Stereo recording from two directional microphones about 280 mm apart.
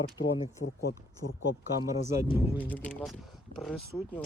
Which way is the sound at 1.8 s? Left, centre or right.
Centre.